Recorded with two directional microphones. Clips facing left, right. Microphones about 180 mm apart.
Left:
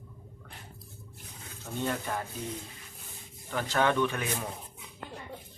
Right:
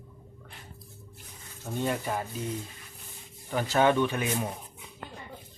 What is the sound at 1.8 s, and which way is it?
Speech, 15° right (ahead or behind).